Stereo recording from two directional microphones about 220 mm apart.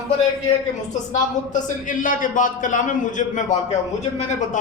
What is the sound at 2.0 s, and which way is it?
A man's voice, 35° left (ahead or behind).